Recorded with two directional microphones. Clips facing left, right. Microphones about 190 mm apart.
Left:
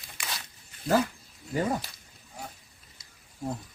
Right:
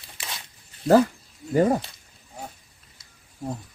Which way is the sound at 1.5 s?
40° right (ahead or behind).